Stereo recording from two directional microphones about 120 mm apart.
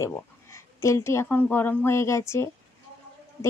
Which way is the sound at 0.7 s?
25° left (ahead or behind).